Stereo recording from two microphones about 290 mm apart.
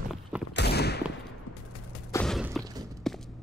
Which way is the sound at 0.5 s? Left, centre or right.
Left.